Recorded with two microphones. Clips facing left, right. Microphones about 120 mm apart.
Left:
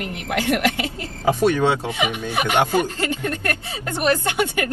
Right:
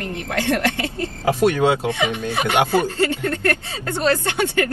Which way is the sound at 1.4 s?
10° right (ahead or behind).